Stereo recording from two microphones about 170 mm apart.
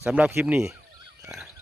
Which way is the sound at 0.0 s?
5° right (ahead or behind).